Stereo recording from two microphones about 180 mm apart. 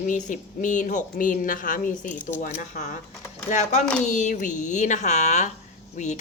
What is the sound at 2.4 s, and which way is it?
A woman's voice, 45° left (ahead or behind).